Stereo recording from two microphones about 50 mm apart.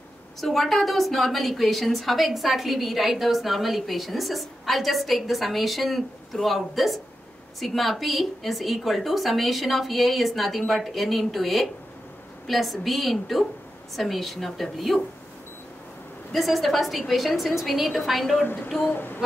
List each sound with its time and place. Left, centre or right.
0.4 s a woman's voice: centre
16.3 s a woman's voice: centre
18.4 s child singing: left
18.9 s speech: left